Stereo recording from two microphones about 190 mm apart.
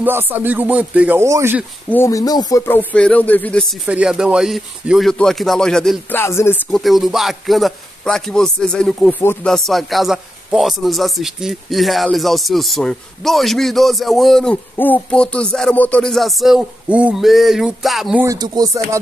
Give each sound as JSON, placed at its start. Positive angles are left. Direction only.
{"t": 0.0, "sound": "speech", "side_deg": -10}
{"t": 1.9, "sound": "a man's voice", "side_deg": 15}
{"t": 6.2, "sound": "speech", "side_deg": 15}
{"t": 6.7, "sound": "a man's voice", "side_deg": 0}
{"t": 18.2, "sound": "speech", "side_deg": -20}